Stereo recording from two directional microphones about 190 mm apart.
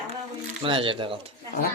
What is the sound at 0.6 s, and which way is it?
Speech, 25° right (ahead or behind).